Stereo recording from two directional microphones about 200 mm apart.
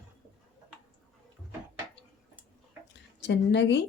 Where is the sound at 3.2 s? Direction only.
60° left (ahead or behind).